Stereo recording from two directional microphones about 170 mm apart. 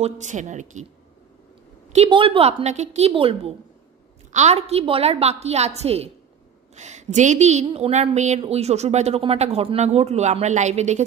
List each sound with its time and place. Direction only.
0.0 s speech: 45° right (ahead or behind)
1.9 s a woman's voice: 35° right (ahead or behind)